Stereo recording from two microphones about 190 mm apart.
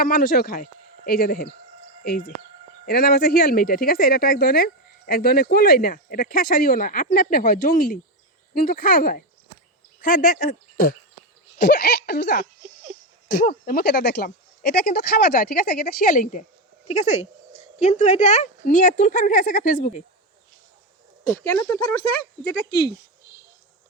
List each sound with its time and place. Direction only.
0.0 s speech: 50° left (ahead or behind)
21.2 s speech: 15° left (ahead or behind)